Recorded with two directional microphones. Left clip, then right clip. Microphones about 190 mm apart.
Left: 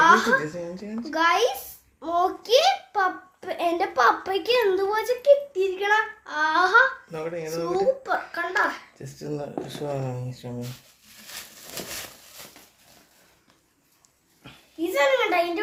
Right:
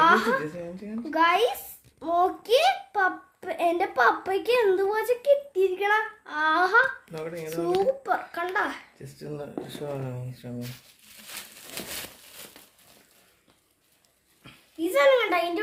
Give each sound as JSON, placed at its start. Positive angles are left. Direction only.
{"t": 0.0, "sound": "a woman's voice", "side_deg": -25}
{"t": 0.6, "sound": "speech", "side_deg": 10}
{"t": 1.1, "sound": "a child's voice", "side_deg": -20}
{"t": 7.1, "sound": "speech", "side_deg": 5}
{"t": 7.6, "sound": "a child's voice", "side_deg": -30}
{"t": 9.1, "sound": "speech", "side_deg": 10}
{"t": 14.9, "sound": "a child's voice", "side_deg": -30}